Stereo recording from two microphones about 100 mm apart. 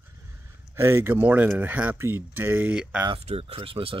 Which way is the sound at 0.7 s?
25° right (ahead or behind).